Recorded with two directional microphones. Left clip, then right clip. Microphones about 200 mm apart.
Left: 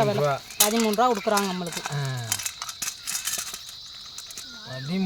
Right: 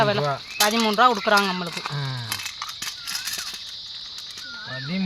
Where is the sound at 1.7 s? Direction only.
45° left (ahead or behind).